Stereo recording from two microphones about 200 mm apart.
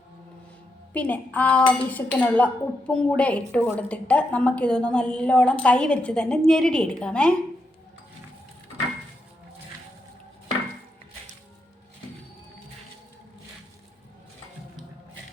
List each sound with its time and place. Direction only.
0.9 s speech: 5° left (ahead or behind)